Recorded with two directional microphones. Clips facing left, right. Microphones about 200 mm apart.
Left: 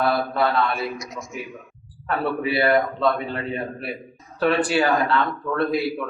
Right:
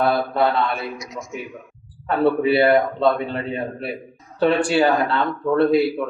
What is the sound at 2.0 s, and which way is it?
A man's voice, 25° right (ahead or behind).